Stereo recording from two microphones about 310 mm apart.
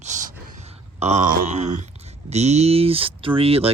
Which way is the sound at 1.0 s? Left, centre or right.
Right.